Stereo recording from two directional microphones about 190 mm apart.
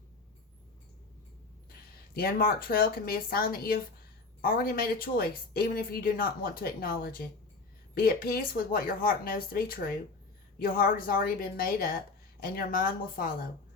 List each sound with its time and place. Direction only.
2.1 s speech: 50° left (ahead or behind)